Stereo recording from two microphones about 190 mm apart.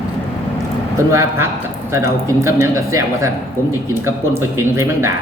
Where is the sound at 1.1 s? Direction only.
15° right (ahead or behind).